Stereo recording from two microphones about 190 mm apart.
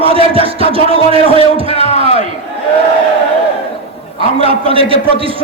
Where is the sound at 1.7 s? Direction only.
35° left (ahead or behind).